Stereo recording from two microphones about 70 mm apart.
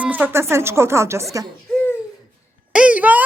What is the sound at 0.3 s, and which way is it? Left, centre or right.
A woman's voice, right.